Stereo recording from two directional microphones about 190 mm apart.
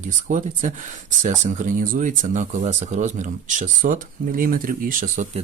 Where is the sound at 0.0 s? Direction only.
40° right (ahead or behind).